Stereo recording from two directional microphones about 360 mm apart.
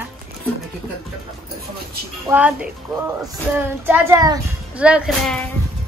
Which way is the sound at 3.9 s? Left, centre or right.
Centre.